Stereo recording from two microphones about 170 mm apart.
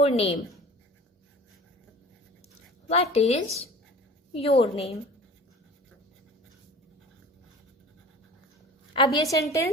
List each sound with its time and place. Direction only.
0.0 s a woman's voice: 35° left (ahead or behind)
2.9 s a woman's voice: 35° left (ahead or behind)
9.1 s a woman's voice: 20° left (ahead or behind)